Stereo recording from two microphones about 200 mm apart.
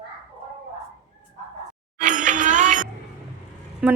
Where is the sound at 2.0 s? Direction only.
40° right (ahead or behind).